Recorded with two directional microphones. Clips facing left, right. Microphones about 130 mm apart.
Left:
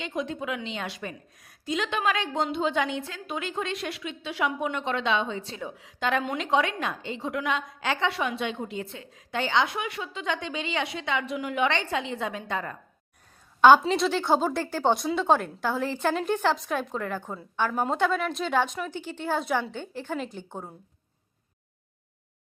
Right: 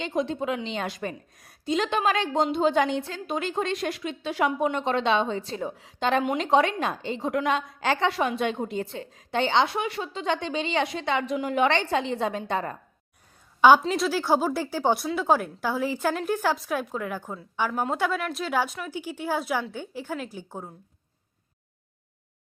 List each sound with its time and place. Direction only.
0.0 s a woman's voice: 35° right (ahead or behind)
13.6 s speech: 5° right (ahead or behind)